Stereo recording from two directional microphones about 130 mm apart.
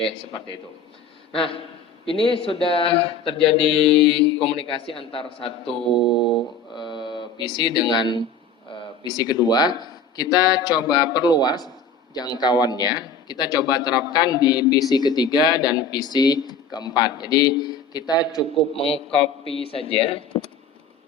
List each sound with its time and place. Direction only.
1.3 s speech: 45° left (ahead or behind)
18.7 s speech: 45° left (ahead or behind)